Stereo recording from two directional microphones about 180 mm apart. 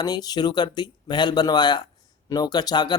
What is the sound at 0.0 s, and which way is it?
Speech, 20° left (ahead or behind).